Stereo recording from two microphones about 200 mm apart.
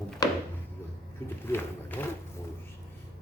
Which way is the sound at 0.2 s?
20° left (ahead or behind).